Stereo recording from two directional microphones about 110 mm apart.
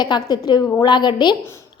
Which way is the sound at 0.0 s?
40° left (ahead or behind).